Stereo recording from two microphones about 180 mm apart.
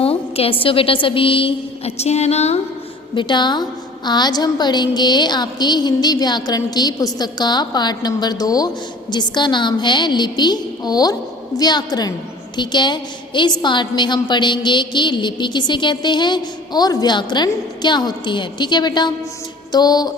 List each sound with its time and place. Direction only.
0.0 s a sound: 30° left (ahead or behind)
0.6 s a woman's voice: 30° left (ahead or behind)
3.2 s a woman's voice: 25° left (ahead or behind)